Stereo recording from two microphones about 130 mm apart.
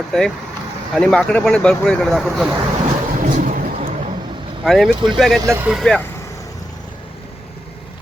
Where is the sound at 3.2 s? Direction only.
85° right.